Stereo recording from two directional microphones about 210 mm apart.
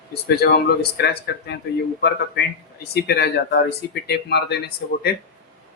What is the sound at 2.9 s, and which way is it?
Speech, 50° left (ahead or behind).